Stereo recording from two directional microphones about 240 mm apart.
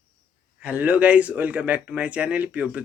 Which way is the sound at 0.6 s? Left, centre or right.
Centre.